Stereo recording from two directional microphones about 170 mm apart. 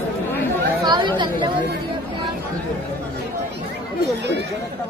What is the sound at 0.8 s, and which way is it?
Chatter, 25° right (ahead or behind).